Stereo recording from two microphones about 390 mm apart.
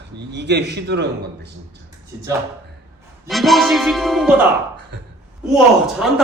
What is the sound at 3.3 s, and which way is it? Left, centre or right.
A man's voice, centre.